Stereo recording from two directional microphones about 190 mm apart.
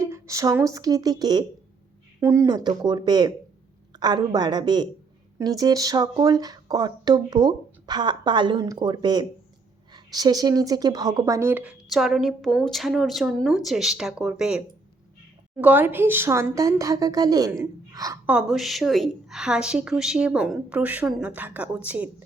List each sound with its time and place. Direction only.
0.0 s a woman's voice: 15° right (ahead or behind)
18.3 s a woman's voice: 5° right (ahead or behind)